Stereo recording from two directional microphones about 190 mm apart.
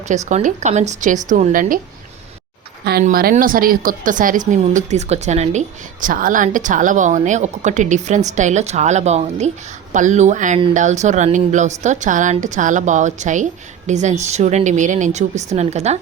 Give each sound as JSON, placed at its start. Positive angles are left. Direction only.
{"t": 0.3, "sound": "a woman's voice", "side_deg": -40}
{"t": 3.0, "sound": "a woman's voice", "side_deg": -50}